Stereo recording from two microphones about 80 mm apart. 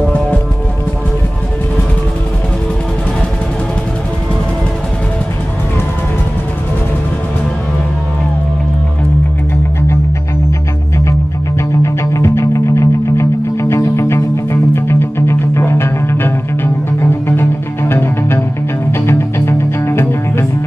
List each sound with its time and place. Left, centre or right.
11.1 s music: left